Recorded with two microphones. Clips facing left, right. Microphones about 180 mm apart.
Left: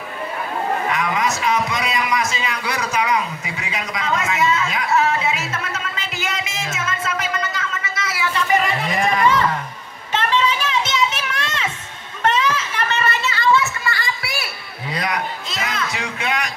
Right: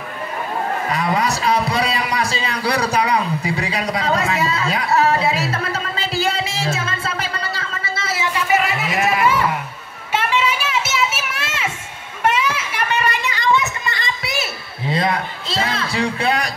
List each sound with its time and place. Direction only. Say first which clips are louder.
0.8 s a sound: right 1 dB; 35° right (ahead or behind)
8.4 s livestock: even; 5° right (ahead or behind)
10.1 s children playing: even; 10° right (ahead or behind); by 16.4 s 35° right (ahead or behind)